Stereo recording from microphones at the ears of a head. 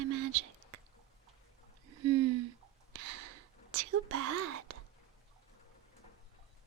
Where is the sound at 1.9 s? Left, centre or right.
Right.